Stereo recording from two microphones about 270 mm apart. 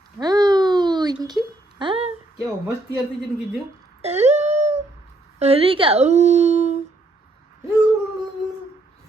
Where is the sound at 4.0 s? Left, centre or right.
Right.